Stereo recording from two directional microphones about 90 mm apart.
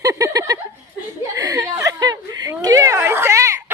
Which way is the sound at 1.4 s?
45° right (ahead or behind).